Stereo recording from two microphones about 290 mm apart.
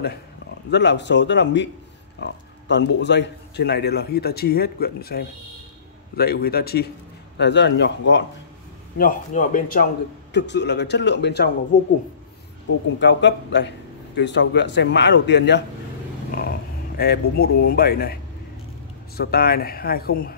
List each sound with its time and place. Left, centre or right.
0.7 s a man's voice: left
12.7 s a man's voice: left